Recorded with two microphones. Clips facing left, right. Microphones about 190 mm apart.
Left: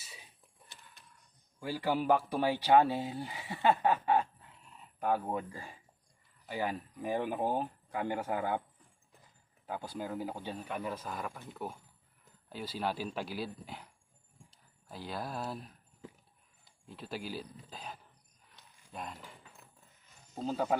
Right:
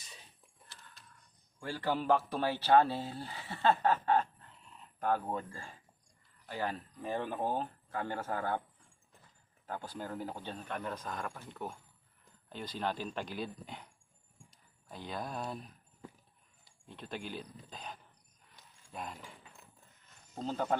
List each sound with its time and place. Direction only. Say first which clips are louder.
0.0 s a sound: left 1 dB; 5° left (ahead or behind)
1.5 s speech: left 2 dB; 10° left (ahead or behind)
9.6 s speech: left 2 dB; 10° left (ahead or behind)
16.9 s speech: left 2 dB; 5° left (ahead or behind)
18.9 s a sound: even; centre (ahead or behind)
20.3 s speech: left 2 dB; 5° left (ahead or behind)